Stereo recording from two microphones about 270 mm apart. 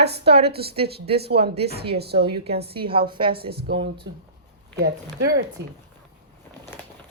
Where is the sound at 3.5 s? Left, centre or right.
Right.